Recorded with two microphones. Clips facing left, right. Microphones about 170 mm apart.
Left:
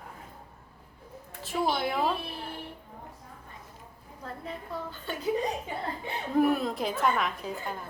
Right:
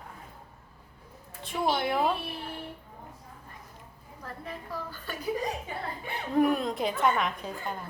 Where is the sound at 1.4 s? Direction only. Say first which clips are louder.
Even; centre (ahead or behind).